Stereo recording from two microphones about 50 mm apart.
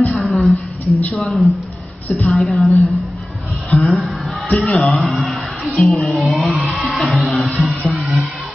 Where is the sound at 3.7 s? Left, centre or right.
Centre.